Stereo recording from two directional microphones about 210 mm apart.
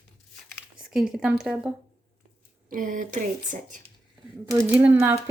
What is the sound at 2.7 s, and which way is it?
Speech, 40° right (ahead or behind).